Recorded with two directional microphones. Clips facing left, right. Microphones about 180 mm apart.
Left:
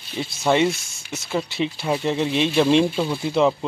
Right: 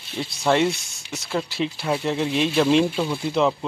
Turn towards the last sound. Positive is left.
turn(degrees=0)  # may be behind; listen again after turning